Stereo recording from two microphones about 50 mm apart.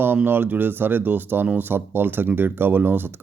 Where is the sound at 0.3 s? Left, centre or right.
Right.